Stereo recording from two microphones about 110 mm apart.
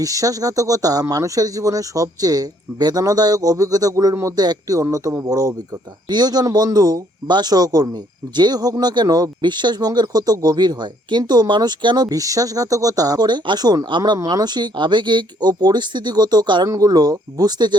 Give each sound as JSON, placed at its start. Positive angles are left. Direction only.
{"t": 0.0, "sound": "speech", "side_deg": -30}